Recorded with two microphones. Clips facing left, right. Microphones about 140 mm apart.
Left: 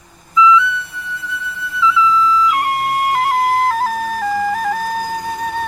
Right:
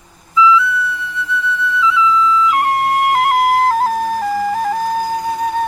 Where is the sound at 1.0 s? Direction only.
40° left (ahead or behind).